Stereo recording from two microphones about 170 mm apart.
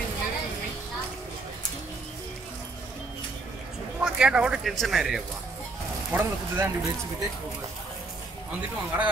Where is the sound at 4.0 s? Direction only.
5° right (ahead or behind).